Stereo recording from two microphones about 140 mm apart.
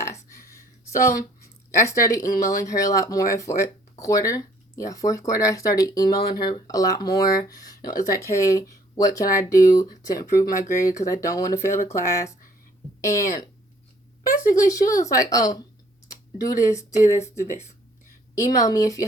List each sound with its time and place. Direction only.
0.3 s a sound: 20° left (ahead or behind)
2.4 s speech: 25° left (ahead or behind)
14.4 s speech: 20° left (ahead or behind)
17.4 s speech: 55° left (ahead or behind)
18.3 s speech: 25° left (ahead or behind)